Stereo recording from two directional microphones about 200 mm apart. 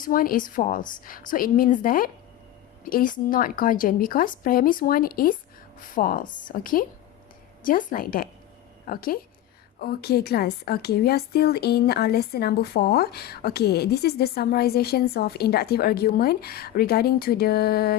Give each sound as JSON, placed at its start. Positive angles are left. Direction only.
{"t": 0.0, "sound": "a woman's voice", "side_deg": 45}